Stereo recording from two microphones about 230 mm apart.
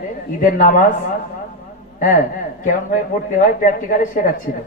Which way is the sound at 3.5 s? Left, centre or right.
Left.